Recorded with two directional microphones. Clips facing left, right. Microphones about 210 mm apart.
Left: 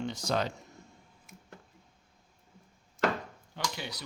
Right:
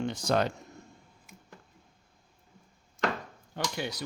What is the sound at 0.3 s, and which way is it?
Speech, 55° right (ahead or behind).